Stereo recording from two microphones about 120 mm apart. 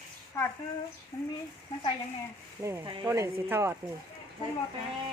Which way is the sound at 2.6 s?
25° right (ahead or behind).